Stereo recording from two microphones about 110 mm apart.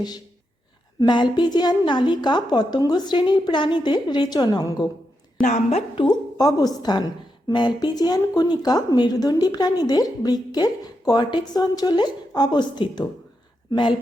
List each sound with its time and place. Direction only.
0.9 s a woman's voice: 45° left (ahead or behind)
6.0 s speech: 40° left (ahead or behind)